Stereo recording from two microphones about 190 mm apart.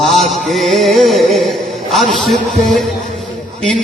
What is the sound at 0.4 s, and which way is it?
Music, centre (ahead or behind).